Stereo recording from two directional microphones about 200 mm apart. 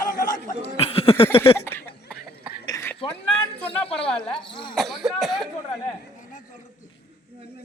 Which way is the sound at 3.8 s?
30° left (ahead or behind).